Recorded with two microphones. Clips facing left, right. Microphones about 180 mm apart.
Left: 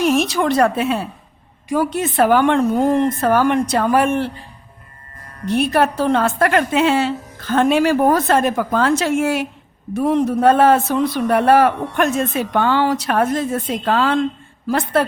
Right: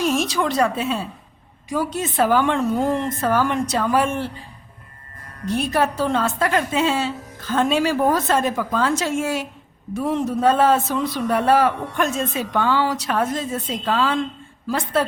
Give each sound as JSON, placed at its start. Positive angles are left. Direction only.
{"t": 0.0, "sound": "a man's voice", "side_deg": 60}
{"t": 5.5, "sound": "a man's voice", "side_deg": 65}